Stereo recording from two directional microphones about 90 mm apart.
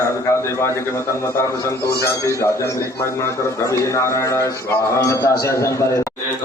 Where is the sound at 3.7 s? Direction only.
35° left (ahead or behind).